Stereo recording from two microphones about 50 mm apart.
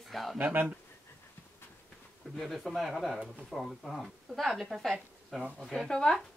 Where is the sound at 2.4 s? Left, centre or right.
Centre.